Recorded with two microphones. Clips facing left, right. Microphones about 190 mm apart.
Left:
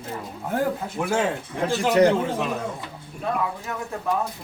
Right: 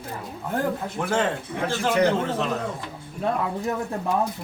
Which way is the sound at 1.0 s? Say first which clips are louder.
Even; 5° left (ahead or behind).